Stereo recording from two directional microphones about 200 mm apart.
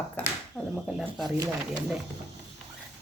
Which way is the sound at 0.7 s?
Centre (ahead or behind).